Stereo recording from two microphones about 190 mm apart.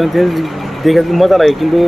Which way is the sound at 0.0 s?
Centre (ahead or behind).